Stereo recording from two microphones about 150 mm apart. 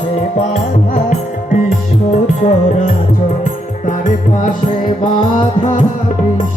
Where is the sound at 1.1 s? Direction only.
60° left (ahead or behind).